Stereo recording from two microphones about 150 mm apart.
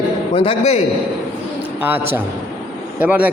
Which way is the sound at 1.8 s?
15° right (ahead or behind).